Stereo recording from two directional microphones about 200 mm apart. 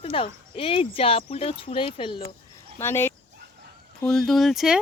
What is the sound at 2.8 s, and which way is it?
Speech, 10° left (ahead or behind).